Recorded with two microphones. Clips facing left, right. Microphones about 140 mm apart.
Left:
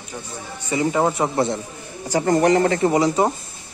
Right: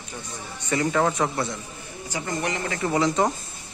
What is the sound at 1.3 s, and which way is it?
Speech, 30° left (ahead or behind).